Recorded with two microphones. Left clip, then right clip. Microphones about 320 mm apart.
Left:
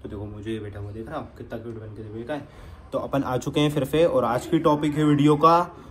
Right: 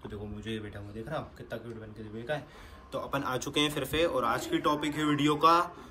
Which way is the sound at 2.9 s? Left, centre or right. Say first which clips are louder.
Left 7 dB; centre.